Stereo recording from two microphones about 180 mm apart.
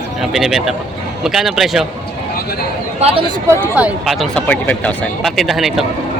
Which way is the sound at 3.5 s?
10° right (ahead or behind).